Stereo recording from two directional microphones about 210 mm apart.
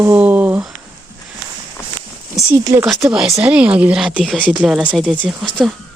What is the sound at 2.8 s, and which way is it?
Speech, centre (ahead or behind).